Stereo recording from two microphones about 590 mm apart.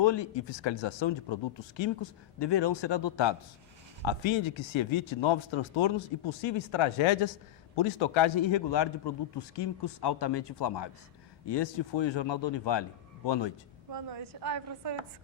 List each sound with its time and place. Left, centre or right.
0.0 s speech: left
14.3 s a woman's voice: right